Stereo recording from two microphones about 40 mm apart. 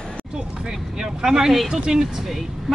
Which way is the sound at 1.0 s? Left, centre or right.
Centre.